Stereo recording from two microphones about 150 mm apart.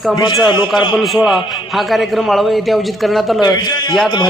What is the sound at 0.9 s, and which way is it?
A man's voice, centre (ahead or behind).